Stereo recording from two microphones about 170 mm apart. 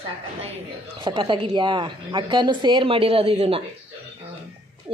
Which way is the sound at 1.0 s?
30° right (ahead or behind).